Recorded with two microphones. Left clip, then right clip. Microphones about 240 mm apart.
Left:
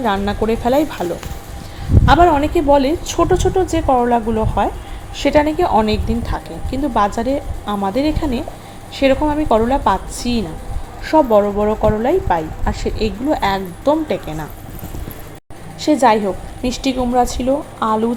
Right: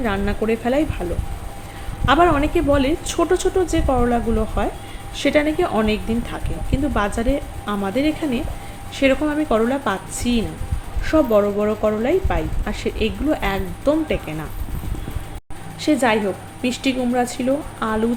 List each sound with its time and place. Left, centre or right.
0.0 s a woman's voice: centre
2.0 s a woman's voice: centre
15.8 s a woman's voice: centre